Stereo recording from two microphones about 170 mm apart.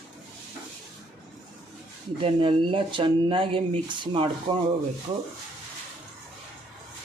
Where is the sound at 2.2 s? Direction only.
30° right (ahead or behind).